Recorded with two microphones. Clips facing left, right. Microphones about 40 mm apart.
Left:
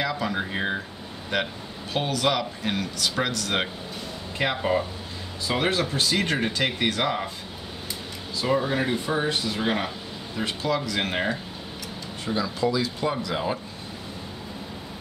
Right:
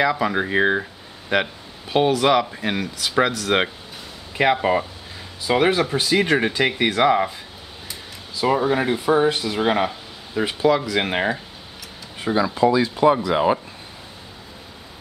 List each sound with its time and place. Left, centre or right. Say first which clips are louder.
0.0 s a man's voice: right 7 dB; centre
8.4 s speech: right 5 dB; centre
12.3 s speech: right 7 dB; right